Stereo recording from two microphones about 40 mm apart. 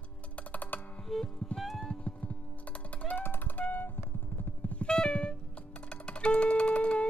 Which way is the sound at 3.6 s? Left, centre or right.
Left.